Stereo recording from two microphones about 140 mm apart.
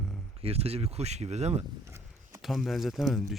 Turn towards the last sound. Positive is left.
turn(degrees=0)  # may be behind; listen again after turning